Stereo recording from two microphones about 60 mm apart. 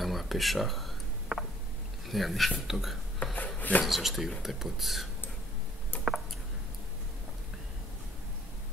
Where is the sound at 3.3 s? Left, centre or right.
Left.